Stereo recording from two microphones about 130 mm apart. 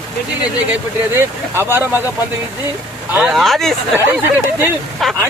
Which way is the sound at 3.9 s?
20° right (ahead or behind).